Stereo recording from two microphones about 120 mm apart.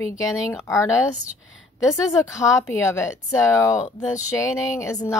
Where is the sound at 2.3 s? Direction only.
25° left (ahead or behind).